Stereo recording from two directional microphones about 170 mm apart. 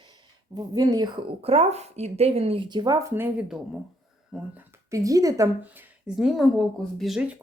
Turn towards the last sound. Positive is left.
turn(degrees=-5)  # may be behind; listen again after turning